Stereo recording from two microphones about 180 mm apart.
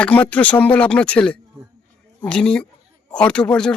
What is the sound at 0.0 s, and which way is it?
Speech, 10° left (ahead or behind).